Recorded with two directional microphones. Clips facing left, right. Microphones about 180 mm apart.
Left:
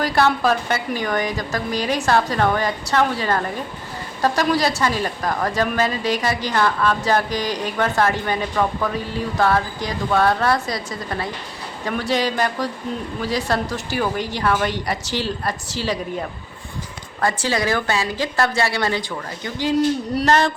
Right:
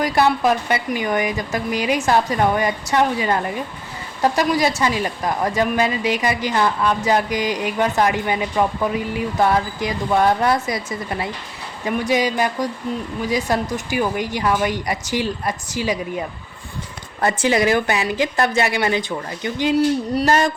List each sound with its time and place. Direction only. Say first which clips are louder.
0.1 s a woman's voice: right 1 dB; 15° right (ahead or behind)
11.9 s a woman's voice: right 2 dB; 5° right (ahead or behind)
13.2 s a woman's voice: right 1 dB; 20° right (ahead or behind)
17.2 s a woman's voice: right 3 dB; 20° right (ahead or behind)